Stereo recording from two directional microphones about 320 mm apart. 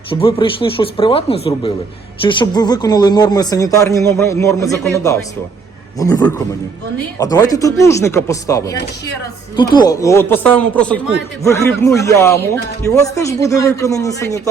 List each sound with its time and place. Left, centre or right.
0.1 s speech: centre